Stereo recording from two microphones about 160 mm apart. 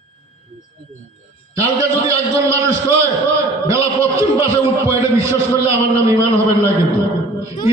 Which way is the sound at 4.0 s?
20° right (ahead or behind).